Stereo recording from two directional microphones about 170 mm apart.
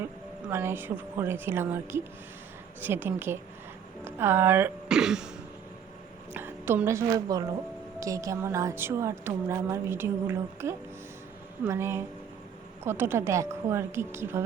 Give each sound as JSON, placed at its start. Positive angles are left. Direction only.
{"t": 0.0, "sound": "a woman's voice", "side_deg": -15}
{"t": 6.3, "sound": "a woman's voice", "side_deg": -10}